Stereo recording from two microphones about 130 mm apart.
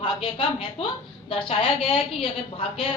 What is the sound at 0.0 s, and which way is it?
A woman's voice, 45° left (ahead or behind).